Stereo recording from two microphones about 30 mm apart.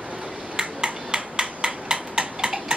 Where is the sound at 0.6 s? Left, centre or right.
Right.